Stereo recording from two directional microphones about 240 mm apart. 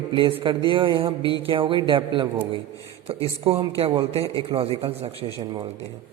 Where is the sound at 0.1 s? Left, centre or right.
Right.